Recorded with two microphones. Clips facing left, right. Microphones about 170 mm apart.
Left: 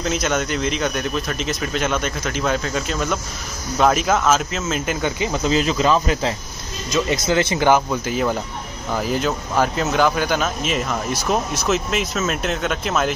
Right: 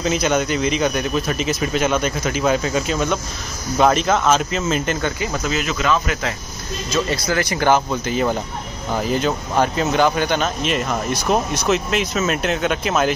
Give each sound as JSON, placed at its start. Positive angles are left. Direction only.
{"t": 0.0, "sound": "speech", "side_deg": 0}
{"t": 5.0, "sound": "speech", "side_deg": 20}
{"t": 5.5, "sound": "speech", "side_deg": 30}
{"t": 8.0, "sound": "speech", "side_deg": 5}